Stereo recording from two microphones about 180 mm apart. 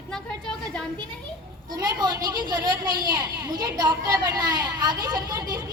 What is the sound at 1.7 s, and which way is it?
Speech, 20° right (ahead or behind).